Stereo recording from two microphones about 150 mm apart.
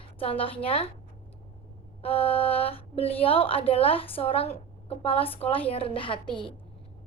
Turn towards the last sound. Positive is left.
turn(degrees=5)  # may be behind; listen again after turning